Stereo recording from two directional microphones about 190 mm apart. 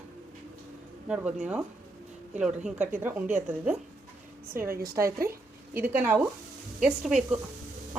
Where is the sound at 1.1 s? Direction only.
5° right (ahead or behind).